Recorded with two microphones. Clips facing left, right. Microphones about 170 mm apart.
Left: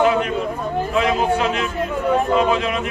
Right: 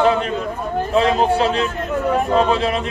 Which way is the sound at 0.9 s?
35° right (ahead or behind).